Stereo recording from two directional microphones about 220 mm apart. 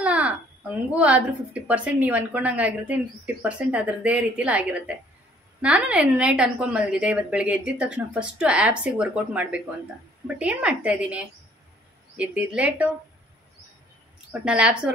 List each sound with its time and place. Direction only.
0.0 s a woman's voice: 5° right (ahead or behind)
14.4 s a woman's voice: 5° right (ahead or behind)